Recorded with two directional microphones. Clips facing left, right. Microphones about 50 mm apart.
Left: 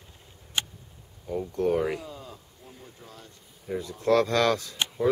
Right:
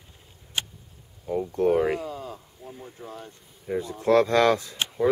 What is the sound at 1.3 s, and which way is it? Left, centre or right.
Speech, centre.